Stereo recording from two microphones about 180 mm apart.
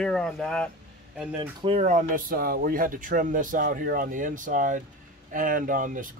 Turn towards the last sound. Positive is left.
turn(degrees=-45)  # may be behind; listen again after turning